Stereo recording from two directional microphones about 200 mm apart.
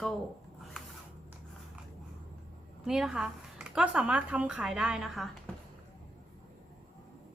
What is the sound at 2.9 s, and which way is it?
Speech, centre (ahead or behind).